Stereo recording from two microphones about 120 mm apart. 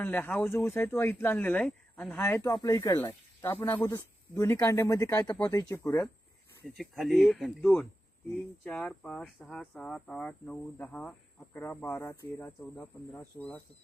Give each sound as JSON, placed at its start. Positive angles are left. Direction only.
{"t": 0.0, "sound": "a man's voice", "side_deg": 15}
{"t": 4.4, "sound": "speech", "side_deg": 25}
{"t": 6.7, "sound": "speech", "side_deg": 0}